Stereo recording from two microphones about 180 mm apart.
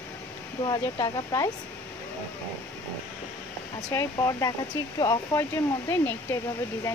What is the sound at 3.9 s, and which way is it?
Speech, 15° left (ahead or behind).